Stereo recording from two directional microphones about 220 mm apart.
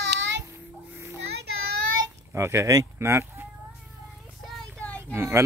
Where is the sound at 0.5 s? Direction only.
10° right (ahead or behind).